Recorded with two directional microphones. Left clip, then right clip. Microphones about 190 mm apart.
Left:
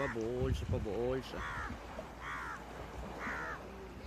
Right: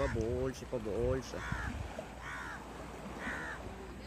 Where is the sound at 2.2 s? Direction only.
40° right (ahead or behind).